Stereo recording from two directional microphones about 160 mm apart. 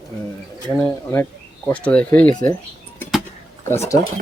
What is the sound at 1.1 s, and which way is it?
Speech, 10° left (ahead or behind).